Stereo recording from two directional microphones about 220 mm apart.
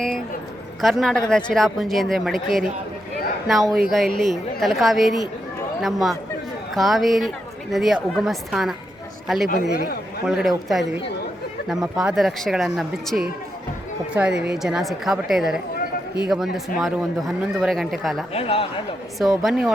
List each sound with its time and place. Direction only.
0.8 s a man's voice: centre (ahead or behind)
9.5 s a man's voice: 45° left (ahead or behind)
10.2 s speech: 5° right (ahead or behind)
18.3 s a man's voice: 25° left (ahead or behind)
19.2 s speech: centre (ahead or behind)